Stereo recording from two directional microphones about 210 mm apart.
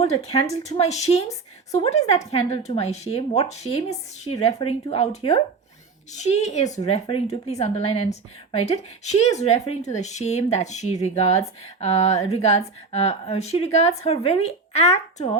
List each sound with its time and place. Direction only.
0.0 s speech: 30° left (ahead or behind)